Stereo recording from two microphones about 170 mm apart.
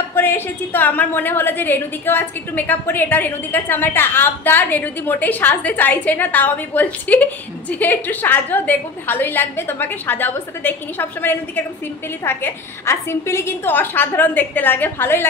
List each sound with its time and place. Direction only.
0.1 s a woman's voice: 10° left (ahead or behind)